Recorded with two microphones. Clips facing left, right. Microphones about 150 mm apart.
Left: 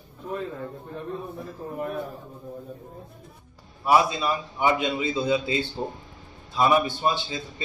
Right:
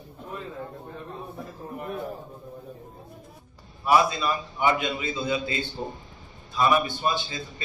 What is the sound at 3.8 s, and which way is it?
A man's voice, 20° left (ahead or behind).